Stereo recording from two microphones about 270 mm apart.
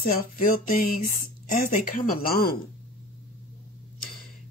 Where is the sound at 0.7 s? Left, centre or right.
Left.